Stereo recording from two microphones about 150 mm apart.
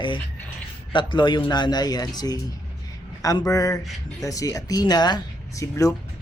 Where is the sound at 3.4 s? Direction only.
20° left (ahead or behind).